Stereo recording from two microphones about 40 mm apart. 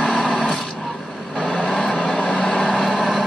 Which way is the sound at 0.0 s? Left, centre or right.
Centre.